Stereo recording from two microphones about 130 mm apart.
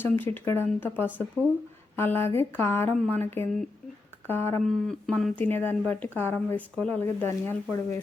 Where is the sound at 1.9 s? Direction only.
15° left (ahead or behind).